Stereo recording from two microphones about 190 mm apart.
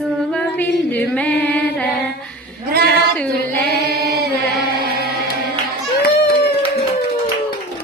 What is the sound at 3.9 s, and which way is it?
Chant, 55° right (ahead or behind).